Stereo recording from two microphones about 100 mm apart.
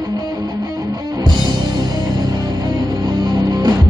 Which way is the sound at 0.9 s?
40° right (ahead or behind).